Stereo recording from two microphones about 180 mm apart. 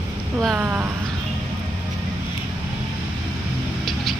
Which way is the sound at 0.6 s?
10° right (ahead or behind).